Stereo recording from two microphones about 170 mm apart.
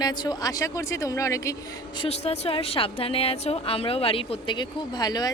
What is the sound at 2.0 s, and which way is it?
A woman's voice, 35° left (ahead or behind).